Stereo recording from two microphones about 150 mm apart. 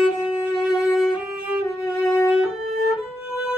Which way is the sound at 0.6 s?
5° right (ahead or behind).